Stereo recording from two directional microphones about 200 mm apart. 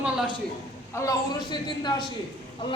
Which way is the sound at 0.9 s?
20° left (ahead or behind).